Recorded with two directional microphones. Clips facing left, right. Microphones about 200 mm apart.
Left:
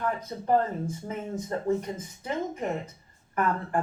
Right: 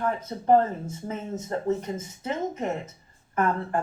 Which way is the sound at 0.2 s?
25° right (ahead or behind).